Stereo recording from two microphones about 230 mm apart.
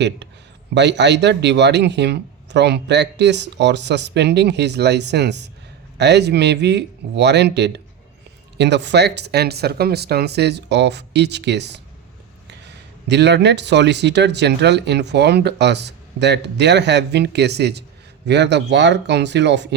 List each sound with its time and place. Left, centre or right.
0.7 s speech: right
13.1 s speech: right